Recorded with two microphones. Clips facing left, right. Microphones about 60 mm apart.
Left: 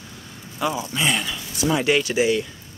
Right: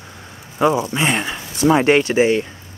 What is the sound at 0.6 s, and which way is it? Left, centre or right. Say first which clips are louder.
Speech: right 8 dB; right.